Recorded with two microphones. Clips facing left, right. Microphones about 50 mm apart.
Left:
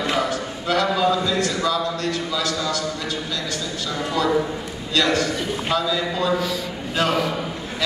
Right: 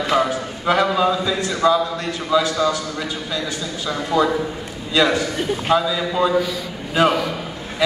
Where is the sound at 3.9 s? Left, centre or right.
Centre.